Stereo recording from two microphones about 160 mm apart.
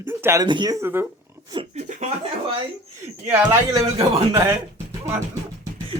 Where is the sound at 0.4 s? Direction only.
30° right (ahead or behind).